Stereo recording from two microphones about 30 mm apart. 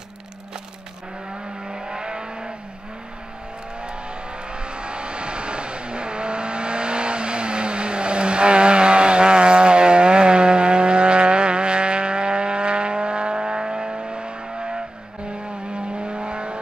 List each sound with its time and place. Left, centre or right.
1.7 s vehicle: right
4.5 s vehicle: right